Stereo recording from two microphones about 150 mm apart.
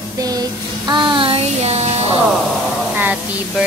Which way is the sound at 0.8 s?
30° right (ahead or behind).